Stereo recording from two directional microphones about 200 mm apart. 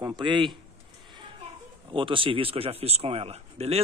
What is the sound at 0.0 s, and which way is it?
Speech, 20° right (ahead or behind).